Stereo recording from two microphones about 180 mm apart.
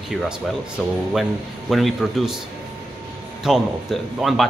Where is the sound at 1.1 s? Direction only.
Centre (ahead or behind).